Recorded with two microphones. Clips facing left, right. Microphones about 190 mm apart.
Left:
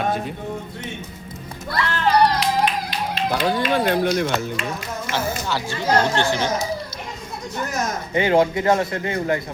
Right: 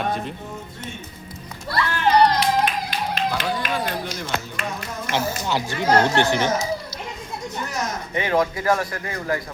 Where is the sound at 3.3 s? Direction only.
60° left (ahead or behind).